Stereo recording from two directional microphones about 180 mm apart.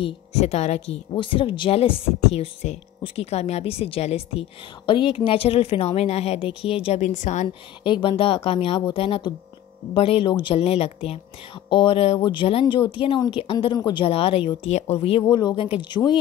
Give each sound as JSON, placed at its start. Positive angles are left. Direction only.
{"t": 0.0, "sound": "speech", "side_deg": 35}
{"t": 7.4, "sound": "speech", "side_deg": 25}